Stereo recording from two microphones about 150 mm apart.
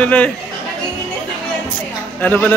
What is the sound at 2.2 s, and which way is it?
Speech, 10° left (ahead or behind).